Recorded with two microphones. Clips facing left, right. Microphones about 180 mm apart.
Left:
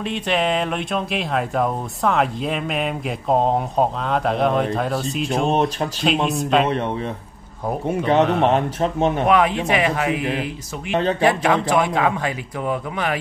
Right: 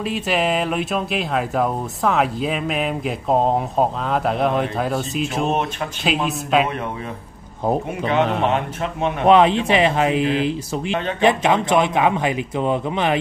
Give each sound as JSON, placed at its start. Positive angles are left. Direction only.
{"t": 0.1, "sound": "speech", "side_deg": -5}
{"t": 8.1, "sound": "speech", "side_deg": 35}
{"t": 9.3, "sound": "a man's voice", "side_deg": -25}